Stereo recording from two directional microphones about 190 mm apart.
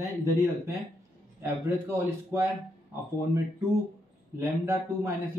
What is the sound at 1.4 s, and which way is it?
Speech, 10° right (ahead or behind).